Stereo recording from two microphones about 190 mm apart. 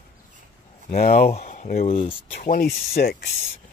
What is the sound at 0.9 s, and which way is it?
Speech, 50° left (ahead or behind).